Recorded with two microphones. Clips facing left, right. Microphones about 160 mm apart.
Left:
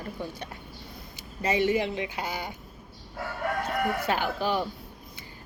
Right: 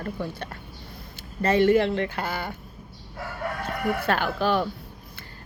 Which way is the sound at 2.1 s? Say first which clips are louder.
Right 3 dB; 55° right (ahead or behind).